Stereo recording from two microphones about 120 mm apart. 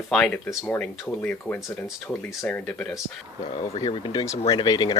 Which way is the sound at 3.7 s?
45° left (ahead or behind).